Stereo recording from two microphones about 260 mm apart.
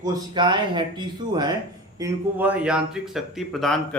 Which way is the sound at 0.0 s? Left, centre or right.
Centre.